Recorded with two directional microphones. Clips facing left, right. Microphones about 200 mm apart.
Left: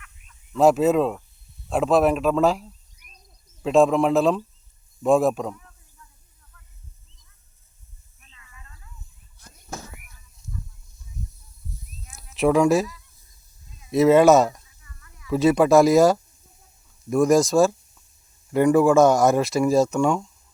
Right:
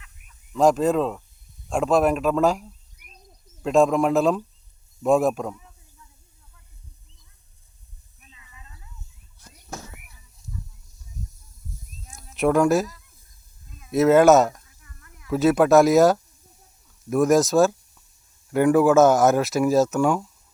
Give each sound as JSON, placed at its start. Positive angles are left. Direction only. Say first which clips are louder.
{"t": 0.5, "sound": "speech", "louder": "left 2 dB", "side_deg": 5}
{"t": 8.2, "sound": "snake", "louder": "right 1 dB", "side_deg": -15}
{"t": 11.2, "sound": "snake", "louder": "left 1 dB", "side_deg": -40}
{"t": 12.3, "sound": "speech", "louder": "left 1 dB", "side_deg": 0}
{"t": 13.7, "sound": "a sound", "louder": "right 3 dB", "side_deg": -55}
{"t": 13.9, "sound": "speech", "louder": "even", "side_deg": 0}
{"t": 14.8, "sound": "a sound", "louder": "right 1 dB", "side_deg": -55}
{"t": 15.3, "sound": "speech", "louder": "even", "side_deg": 0}